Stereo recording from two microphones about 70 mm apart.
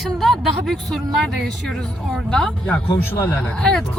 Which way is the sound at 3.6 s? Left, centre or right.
Centre.